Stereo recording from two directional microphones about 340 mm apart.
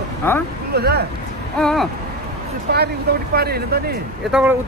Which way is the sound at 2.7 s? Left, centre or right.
Right.